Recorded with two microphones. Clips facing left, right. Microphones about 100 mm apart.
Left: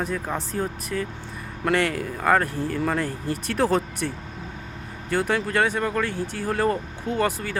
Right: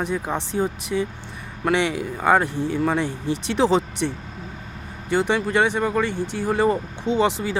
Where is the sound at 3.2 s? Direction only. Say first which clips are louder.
Right 3 dB; 80° right.